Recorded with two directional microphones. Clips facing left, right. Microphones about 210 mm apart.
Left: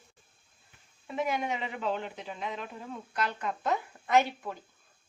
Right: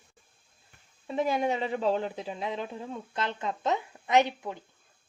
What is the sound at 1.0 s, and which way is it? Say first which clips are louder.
Speech: right 4 dB; 30° right (ahead or behind).